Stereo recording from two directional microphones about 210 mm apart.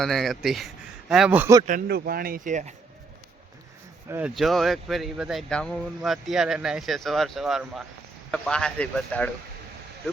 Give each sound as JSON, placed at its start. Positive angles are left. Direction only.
{"t": 0.0, "sound": "speech", "side_deg": 0}
{"t": 1.6, "sound": "speech", "side_deg": -40}
{"t": 4.1, "sound": "speech", "side_deg": -5}